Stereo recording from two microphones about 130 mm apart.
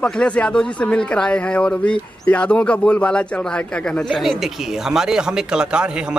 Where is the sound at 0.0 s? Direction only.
10° left (ahead or behind).